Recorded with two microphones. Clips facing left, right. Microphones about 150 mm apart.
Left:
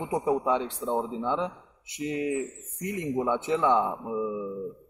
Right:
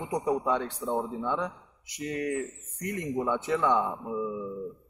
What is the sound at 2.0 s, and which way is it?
Speech, 15° left (ahead or behind).